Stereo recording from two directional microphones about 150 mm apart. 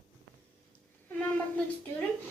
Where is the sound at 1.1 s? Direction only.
10° left (ahead or behind).